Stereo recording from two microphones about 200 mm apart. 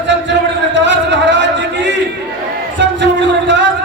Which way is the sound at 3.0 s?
65° right (ahead or behind).